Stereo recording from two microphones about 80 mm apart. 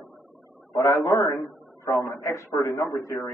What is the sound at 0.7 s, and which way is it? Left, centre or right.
A man's voice, left.